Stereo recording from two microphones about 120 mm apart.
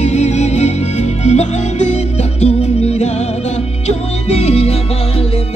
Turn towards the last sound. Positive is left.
turn(degrees=55)  # may be behind; listen again after turning